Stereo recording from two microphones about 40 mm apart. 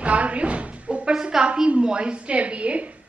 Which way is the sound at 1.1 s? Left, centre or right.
Centre.